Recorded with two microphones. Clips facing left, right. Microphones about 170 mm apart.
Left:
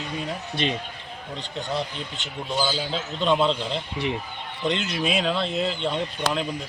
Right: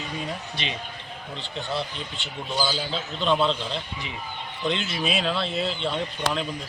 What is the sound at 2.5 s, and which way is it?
Speech, 15° left (ahead or behind).